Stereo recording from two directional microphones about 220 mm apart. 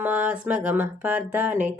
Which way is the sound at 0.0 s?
5° right (ahead or behind).